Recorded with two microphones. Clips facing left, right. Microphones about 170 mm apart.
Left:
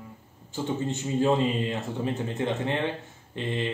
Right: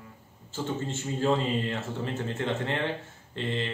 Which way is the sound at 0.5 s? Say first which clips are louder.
Left 3 dB; 15° left (ahead or behind).